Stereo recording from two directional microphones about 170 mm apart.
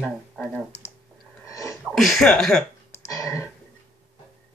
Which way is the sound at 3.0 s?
20° left (ahead or behind).